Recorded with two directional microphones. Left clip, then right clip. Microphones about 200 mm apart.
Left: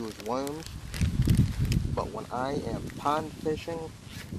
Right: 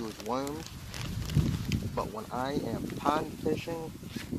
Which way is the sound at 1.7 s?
10° left (ahead or behind).